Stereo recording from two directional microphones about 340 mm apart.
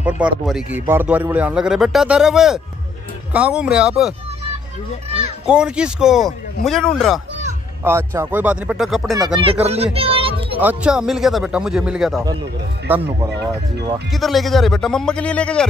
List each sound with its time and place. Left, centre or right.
0.0 s a man's voice: centre
5.5 s a man's voice: centre
9.1 s speech: centre
9.9 s a sound: centre
10.6 s a man's voice: centre